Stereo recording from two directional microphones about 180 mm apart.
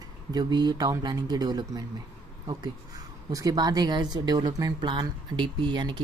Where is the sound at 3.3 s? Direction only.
20° right (ahead or behind).